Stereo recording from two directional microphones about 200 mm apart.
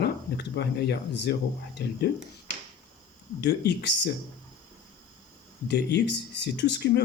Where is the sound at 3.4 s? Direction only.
55° left (ahead or behind).